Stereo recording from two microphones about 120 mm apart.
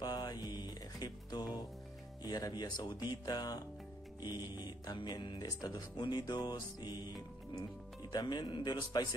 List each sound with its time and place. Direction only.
0.0 s music: 35° left (ahead or behind)
2.2 s speech: 35° left (ahead or behind)